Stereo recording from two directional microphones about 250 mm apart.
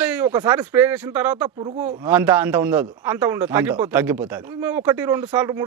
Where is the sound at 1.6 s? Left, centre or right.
Right.